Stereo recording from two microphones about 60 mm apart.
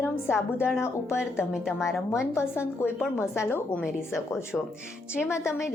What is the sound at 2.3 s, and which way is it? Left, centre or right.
A woman's voice, left.